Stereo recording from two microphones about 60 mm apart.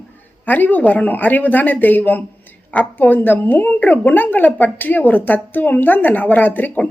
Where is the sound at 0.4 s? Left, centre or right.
Left.